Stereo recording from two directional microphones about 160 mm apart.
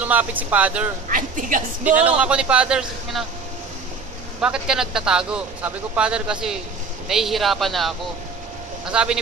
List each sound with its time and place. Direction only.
0.0 s a man's voice: 10° right (ahead or behind)
1.0 s a woman's voice: 55° right (ahead or behind)
2.0 s a man's voice: 10° right (ahead or behind)
4.4 s a man's voice: 5° right (ahead or behind)
8.9 s a man's voice: 5° right (ahead or behind)